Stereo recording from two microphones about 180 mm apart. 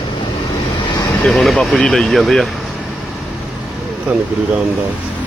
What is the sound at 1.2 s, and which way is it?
Speech, centre (ahead or behind).